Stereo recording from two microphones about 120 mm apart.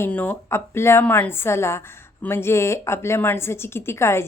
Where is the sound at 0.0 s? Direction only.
15° left (ahead or behind).